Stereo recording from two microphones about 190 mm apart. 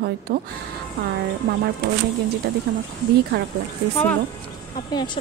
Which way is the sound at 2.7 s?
60° right (ahead or behind).